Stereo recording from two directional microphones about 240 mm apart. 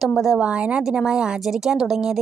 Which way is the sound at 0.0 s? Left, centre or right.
Centre.